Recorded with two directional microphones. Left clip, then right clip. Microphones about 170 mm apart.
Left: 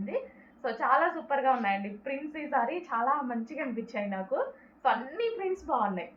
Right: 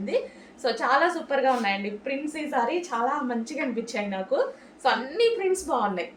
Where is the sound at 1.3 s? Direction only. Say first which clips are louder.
Right 2 dB; 50° right (ahead or behind).